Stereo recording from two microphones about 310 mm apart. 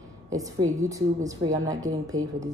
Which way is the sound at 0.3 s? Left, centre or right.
Centre.